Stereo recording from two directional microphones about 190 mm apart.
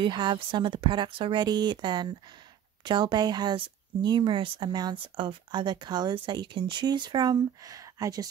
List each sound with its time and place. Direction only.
0.0 s speech: 25° right (ahead or behind)